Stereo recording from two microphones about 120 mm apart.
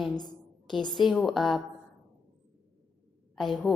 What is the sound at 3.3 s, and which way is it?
Speech, centre (ahead or behind).